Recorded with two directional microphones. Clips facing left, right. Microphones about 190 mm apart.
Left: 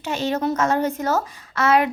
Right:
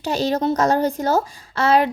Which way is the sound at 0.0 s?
35° right (ahead or behind).